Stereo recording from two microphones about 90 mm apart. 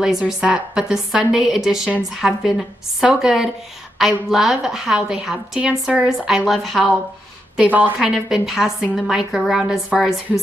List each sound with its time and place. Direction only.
0.0 s a woman's voice: 5° right (ahead or behind)
7.5 s a woman's voice: 20° right (ahead or behind)
8.0 s a woman's voice: 5° right (ahead or behind)